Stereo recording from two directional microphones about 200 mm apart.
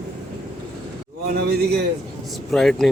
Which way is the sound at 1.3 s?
50° right (ahead or behind).